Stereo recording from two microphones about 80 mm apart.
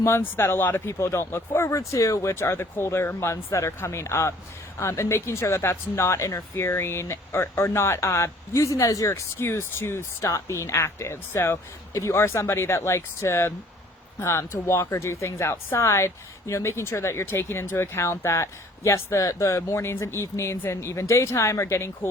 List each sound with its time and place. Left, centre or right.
0.0 s speech: left
0.9 s a woman's voice: left